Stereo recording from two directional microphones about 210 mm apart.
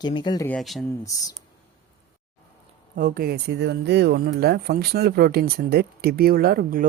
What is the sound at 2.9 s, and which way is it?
Speech, 45° right (ahead or behind).